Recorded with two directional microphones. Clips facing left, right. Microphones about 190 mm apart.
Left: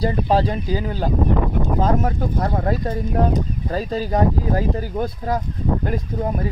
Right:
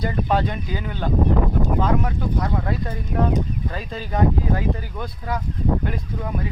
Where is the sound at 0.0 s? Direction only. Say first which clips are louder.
Left 3 dB; 30° left (ahead or behind).